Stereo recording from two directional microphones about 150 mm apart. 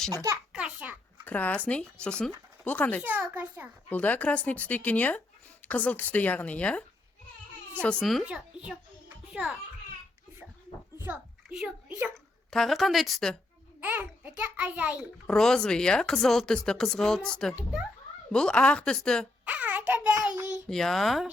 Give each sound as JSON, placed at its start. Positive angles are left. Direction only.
{"t": 0.1, "sound": "a child's voice", "side_deg": -20}
{"t": 0.5, "sound": "a sound", "side_deg": -5}
{"t": 1.2, "sound": "speech", "side_deg": 10}
{"t": 3.0, "sound": "a child's voice", "side_deg": -10}
{"t": 3.8, "sound": "a child's voice", "side_deg": 10}
{"t": 10.9, "sound": "a sound", "side_deg": -15}
{"t": 12.1, "sound": "speech", "side_deg": 0}
{"t": 13.8, "sound": "a child's voice", "side_deg": -10}
{"t": 15.3, "sound": "speech", "side_deg": 5}
{"t": 19.5, "sound": "a child's voice", "side_deg": -10}
{"t": 20.7, "sound": "speech", "side_deg": 5}